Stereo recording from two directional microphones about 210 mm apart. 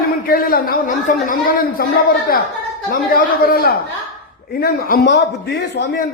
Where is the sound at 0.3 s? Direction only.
45° left (ahead or behind).